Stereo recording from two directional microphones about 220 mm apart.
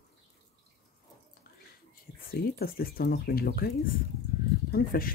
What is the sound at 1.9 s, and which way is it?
Speech, 40° left (ahead or behind).